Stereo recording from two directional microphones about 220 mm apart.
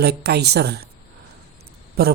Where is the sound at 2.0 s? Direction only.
45° right (ahead or behind).